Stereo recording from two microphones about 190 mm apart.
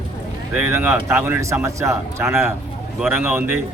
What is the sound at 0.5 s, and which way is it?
A man's voice, 10° right (ahead or behind).